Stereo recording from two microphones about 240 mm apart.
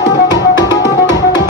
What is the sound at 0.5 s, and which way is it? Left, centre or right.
Music, centre.